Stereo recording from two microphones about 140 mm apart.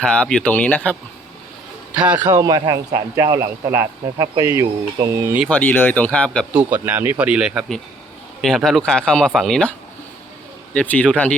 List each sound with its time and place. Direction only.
0.0 s speech: 5° left (ahead or behind)
1.9 s a man's voice: 10° right (ahead or behind)
2.3 s speech: 30° right (ahead or behind)
5.5 s speech: 15° left (ahead or behind)
6.5 s speech: 10° right (ahead or behind); by 9.7 s 5° left (ahead or behind)
10.8 s speech: 10° left (ahead or behind)